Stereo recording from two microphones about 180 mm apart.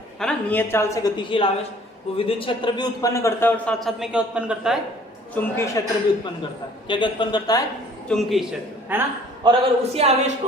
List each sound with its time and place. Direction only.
0.2 s a woman's voice: 5° left (ahead or behind)
3.8 s a man's voice: centre (ahead or behind)
5.3 s a woman's voice: 15° left (ahead or behind)
6.8 s a man's voice: 25° left (ahead or behind)
8.0 s a man's voice: centre (ahead or behind)
8.9 s a man's voice: 10° right (ahead or behind)
9.4 s speech: 30° right (ahead or behind)